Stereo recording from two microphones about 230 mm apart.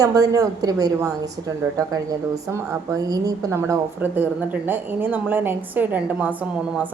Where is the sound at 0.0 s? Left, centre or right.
Centre.